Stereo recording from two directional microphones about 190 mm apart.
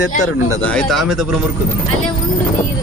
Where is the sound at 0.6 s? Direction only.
5° left (ahead or behind).